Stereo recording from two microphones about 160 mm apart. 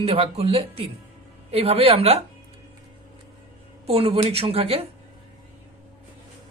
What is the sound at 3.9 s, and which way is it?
Speech, 35° right (ahead or behind).